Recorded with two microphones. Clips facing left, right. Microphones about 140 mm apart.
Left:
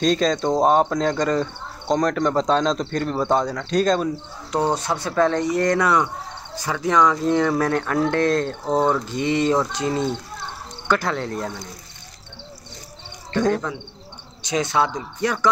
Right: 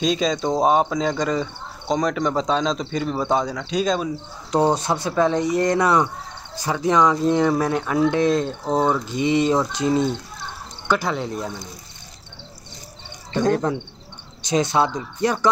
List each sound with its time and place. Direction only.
0.0 s speech: 10° right (ahead or behind)
4.7 s speech: 20° right (ahead or behind)
10.9 s speech: 10° right (ahead or behind)
13.5 s speech: 35° right (ahead or behind)